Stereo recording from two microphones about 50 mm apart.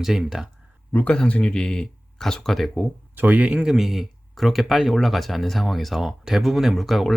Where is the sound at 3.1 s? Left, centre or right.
Right.